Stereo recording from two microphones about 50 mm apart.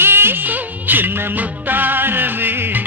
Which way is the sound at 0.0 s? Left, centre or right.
Right.